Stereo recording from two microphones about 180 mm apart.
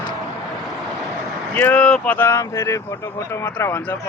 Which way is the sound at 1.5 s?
10° left (ahead or behind).